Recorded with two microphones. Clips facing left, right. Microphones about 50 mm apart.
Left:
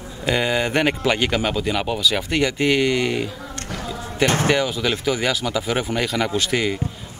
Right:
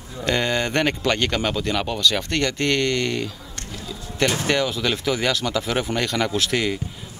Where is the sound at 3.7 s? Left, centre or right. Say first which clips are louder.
Left 5 dB; left.